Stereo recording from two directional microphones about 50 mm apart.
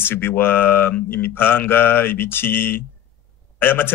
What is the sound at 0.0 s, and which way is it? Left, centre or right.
Speech, left.